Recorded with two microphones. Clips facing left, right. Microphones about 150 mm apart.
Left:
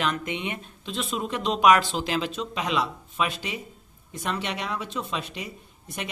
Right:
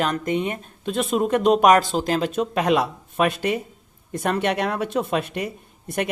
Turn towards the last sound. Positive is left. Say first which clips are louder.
# right 10 dB
turn(degrees=-55)  # may be behind; listen again after turning